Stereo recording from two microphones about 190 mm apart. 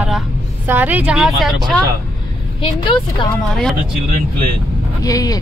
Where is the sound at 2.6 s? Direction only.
25° left (ahead or behind).